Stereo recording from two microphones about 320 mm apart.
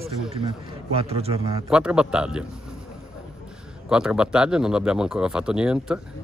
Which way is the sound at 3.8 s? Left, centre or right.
Centre.